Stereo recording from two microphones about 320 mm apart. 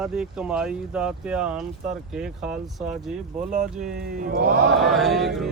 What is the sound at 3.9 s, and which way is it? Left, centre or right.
Speech, right.